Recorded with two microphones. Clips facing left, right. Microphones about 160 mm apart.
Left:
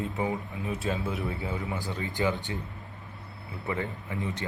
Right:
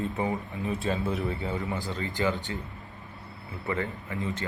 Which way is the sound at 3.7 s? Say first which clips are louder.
Right 1 dB; 15° left (ahead or behind).